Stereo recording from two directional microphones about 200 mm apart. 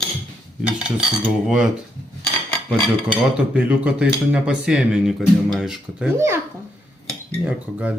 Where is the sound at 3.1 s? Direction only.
5° right (ahead or behind).